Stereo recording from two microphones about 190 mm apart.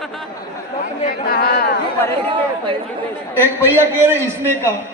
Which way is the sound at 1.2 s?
55° left (ahead or behind).